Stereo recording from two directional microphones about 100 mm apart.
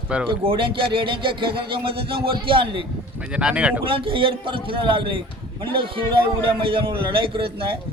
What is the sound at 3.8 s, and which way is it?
Speech, 60° right (ahead or behind).